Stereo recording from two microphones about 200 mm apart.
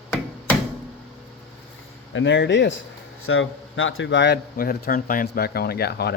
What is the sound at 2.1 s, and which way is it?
Speech, 65° left (ahead or behind).